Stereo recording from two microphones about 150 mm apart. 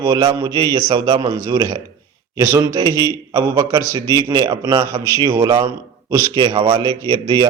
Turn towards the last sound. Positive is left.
turn(degrees=-30)  # may be behind; listen again after turning